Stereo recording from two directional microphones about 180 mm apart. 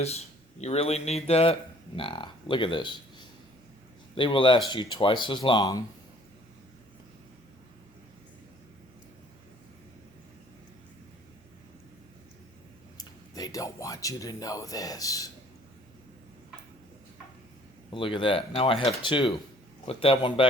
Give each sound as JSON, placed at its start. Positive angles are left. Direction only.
{"t": 0.6, "sound": "speech", "side_deg": 35}
{"t": 13.0, "sound": "speech", "side_deg": 20}
{"t": 17.9, "sound": "speech", "side_deg": 30}